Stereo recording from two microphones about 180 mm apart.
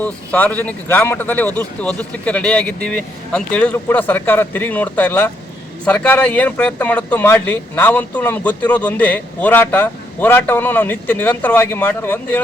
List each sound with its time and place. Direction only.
0.0 s speech: 10° left (ahead or behind)